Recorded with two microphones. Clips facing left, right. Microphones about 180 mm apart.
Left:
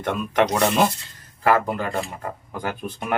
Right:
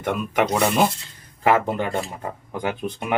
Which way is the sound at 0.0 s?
10° right (ahead or behind).